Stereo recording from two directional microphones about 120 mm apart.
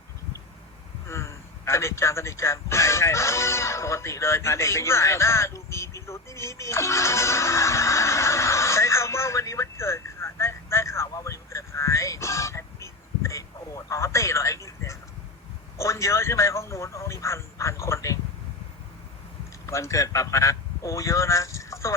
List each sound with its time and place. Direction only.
1.0 s a sound: 20° left (ahead or behind)
15.8 s speech: 25° left (ahead or behind)
19.6 s speech: 25° left (ahead or behind)